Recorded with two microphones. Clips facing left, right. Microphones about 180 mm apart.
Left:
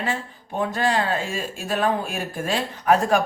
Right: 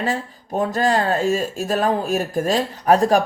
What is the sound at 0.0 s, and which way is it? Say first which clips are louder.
Speech: right 4 dB; 40° right (ahead or behind).